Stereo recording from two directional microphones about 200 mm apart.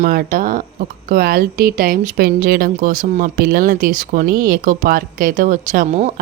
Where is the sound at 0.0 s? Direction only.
45° right (ahead or behind).